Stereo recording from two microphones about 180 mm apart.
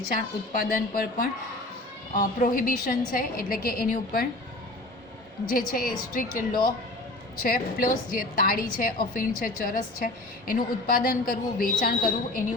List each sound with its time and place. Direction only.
0.6 s a woman's voice: 55° left (ahead or behind)
5.5 s a woman's voice: 55° left (ahead or behind)
6.5 s speech: 25° left (ahead or behind)
7.4 s a woman's voice: 55° left (ahead or behind)